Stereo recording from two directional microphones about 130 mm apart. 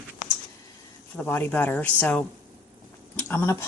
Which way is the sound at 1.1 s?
10° left (ahead or behind).